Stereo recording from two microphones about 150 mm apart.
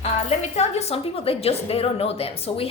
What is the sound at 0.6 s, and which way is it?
A woman's voice, 45° left (ahead or behind).